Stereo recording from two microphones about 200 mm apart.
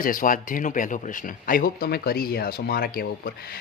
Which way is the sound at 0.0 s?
45° left (ahead or behind).